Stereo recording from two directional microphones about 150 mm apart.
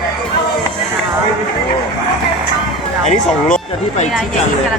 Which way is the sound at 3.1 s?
50° left (ahead or behind).